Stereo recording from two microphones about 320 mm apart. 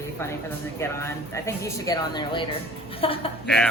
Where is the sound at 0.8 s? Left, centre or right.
Centre.